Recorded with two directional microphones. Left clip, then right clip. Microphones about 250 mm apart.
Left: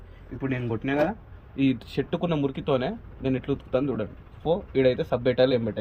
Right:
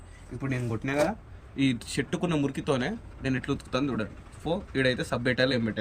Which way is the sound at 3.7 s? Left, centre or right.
Centre.